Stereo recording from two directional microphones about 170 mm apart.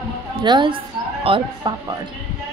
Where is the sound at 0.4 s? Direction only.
25° right (ahead or behind).